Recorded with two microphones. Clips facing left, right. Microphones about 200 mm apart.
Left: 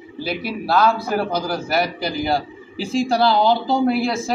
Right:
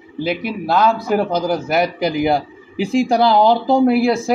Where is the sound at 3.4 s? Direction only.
50° right (ahead or behind).